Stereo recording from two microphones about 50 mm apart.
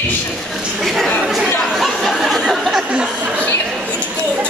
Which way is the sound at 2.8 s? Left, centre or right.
Right.